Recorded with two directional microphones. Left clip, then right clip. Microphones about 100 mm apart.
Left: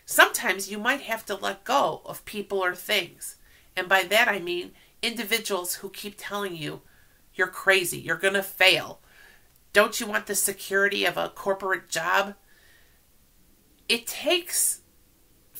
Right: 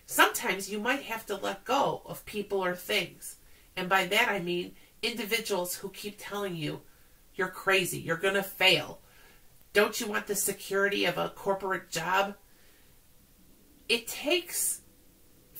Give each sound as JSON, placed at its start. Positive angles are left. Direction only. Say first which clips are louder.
{"t": 0.0, "sound": "a sound", "louder": "left 5 dB", "side_deg": 20}
{"t": 0.4, "sound": "speech", "louder": "left 4 dB", "side_deg": 15}
{"t": 13.8, "sound": "speech", "louder": "left 4 dB", "side_deg": 15}